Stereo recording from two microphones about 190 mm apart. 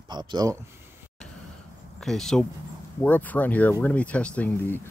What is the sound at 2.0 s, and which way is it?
Speech, centre (ahead or behind).